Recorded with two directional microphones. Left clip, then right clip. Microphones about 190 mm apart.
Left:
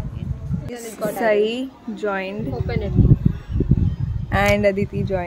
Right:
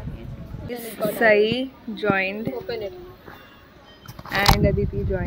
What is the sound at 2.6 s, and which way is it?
Speech, 10° left (ahead or behind).